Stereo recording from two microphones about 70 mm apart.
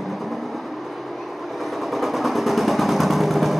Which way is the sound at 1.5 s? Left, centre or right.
Centre.